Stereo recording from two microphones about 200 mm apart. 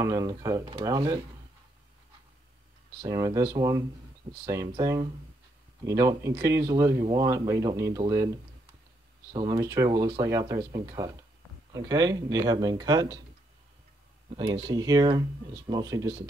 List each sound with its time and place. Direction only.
0.0 s speech: 15° right (ahead or behind)
3.0 s speech: 20° right (ahead or behind)
9.3 s speech: 20° right (ahead or behind)
14.3 s speech: 20° right (ahead or behind)